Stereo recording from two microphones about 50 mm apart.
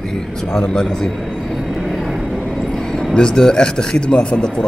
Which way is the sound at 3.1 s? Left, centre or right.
Centre.